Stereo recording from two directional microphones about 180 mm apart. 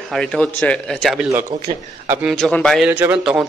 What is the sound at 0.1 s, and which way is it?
A man's voice, 5° left (ahead or behind).